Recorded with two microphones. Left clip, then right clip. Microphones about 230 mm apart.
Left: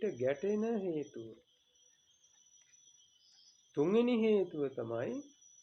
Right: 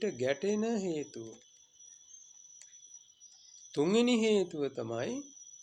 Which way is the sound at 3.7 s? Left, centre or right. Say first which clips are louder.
Right 2 dB; right.